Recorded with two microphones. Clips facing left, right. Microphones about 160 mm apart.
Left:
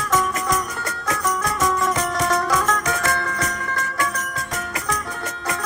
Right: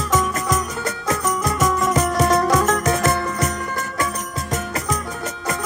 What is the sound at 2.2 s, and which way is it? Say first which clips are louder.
Music: right 5 dB; 25° right (ahead or behind).